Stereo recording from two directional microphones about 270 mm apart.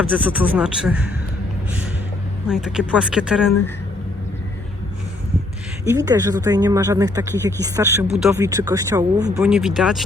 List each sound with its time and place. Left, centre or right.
0.0 s speech: centre
2.5 s speech: centre
5.8 s speech: centre
9.4 s speech: centre